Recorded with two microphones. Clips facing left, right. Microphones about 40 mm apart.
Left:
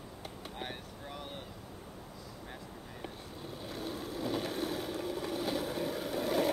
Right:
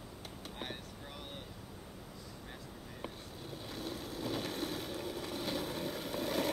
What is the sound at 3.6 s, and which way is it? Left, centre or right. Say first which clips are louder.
Vehicle: left 3 dB; centre.